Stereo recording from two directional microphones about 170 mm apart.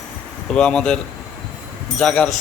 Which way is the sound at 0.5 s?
5° left (ahead or behind).